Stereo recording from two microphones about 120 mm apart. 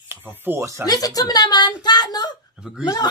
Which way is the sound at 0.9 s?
30° left (ahead or behind).